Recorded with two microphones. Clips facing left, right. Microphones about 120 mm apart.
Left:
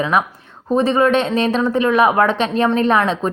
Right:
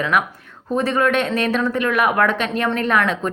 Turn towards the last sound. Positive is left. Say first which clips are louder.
# left 3 dB
turn(degrees=25)  # may be behind; listen again after turning